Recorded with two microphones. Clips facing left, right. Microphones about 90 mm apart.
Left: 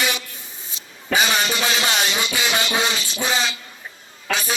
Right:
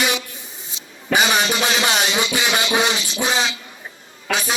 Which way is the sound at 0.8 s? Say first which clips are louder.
Right 2 dB; 50° left (ahead or behind).